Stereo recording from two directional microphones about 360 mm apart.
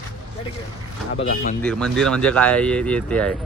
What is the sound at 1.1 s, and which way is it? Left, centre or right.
Speech, left.